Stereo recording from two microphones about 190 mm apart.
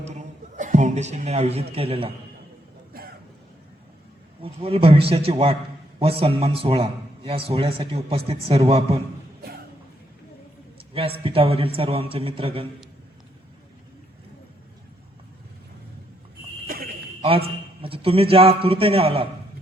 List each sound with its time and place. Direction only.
0.0 s a sound: 35° right (ahead or behind)
1.7 s a man's voice: 30° right (ahead or behind)
4.4 s a man's voice: 30° right (ahead or behind)
10.9 s a man's voice: 30° right (ahead or behind)
16.6 s a sound: 50° right (ahead or behind)
17.2 s a man's voice: 30° right (ahead or behind)